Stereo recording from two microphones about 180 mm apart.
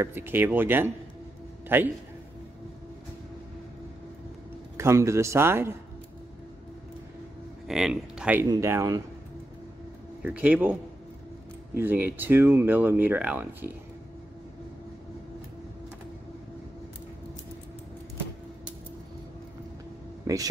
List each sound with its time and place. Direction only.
0.0 s speech: 10° right (ahead or behind)
4.7 s speech: 15° right (ahead or behind)
7.6 s speech: 5° right (ahead or behind)
10.2 s speech: 10° right (ahead or behind)
20.3 s a sound: 20° right (ahead or behind)